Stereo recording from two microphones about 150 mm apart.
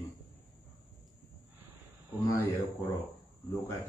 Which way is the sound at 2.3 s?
10° left (ahead or behind).